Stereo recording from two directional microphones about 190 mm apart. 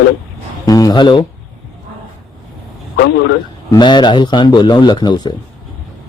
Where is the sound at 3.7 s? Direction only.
25° left (ahead or behind).